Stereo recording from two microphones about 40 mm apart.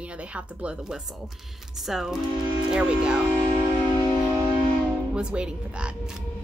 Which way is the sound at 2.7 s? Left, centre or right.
Right.